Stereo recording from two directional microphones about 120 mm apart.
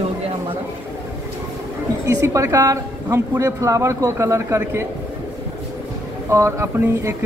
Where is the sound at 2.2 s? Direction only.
25° right (ahead or behind).